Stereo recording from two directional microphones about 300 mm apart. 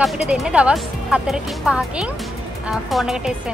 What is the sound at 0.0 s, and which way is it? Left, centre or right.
Speech, centre.